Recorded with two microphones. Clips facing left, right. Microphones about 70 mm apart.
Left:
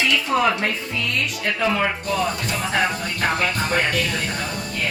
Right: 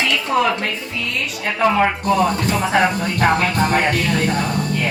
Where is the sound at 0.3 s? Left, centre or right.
Centre.